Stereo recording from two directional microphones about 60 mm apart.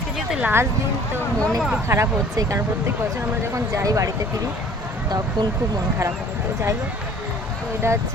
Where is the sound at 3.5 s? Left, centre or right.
Right.